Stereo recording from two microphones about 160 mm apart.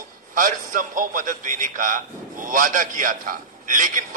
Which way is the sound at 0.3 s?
55° right (ahead or behind).